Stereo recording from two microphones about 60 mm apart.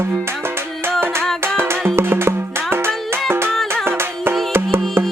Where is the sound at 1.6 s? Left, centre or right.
Right.